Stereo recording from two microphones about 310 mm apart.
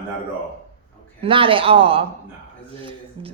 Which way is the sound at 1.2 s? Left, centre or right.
Centre.